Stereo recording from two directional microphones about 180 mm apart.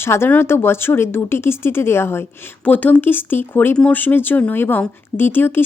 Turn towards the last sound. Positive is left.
turn(degrees=10)  # may be behind; listen again after turning